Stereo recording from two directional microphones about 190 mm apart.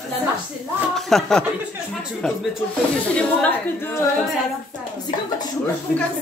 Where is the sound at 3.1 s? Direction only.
5° left (ahead or behind).